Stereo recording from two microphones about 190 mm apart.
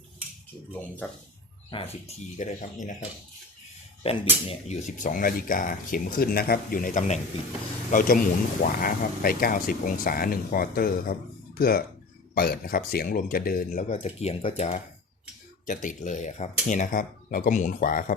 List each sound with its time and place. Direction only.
1.7 s speech: 30° left (ahead or behind)
4.0 s speech: 30° left (ahead or behind); by 18.0 s 45° left (ahead or behind)